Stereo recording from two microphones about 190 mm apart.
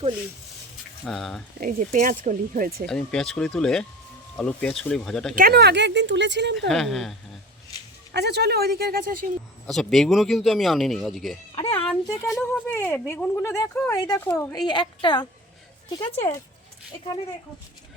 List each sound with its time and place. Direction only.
1.0 s speech: centre (ahead or behind)
1.6 s speech: 45° right (ahead or behind)
2.8 s speech: 5° left (ahead or behind)
5.3 s speech: 50° right (ahead or behind)
6.7 s speech: centre (ahead or behind)
8.1 s speech: 60° right (ahead or behind)
9.6 s speech: centre (ahead or behind)
11.5 s a sound: 30° left (ahead or behind)
12.3 s speech: 5° left (ahead or behind)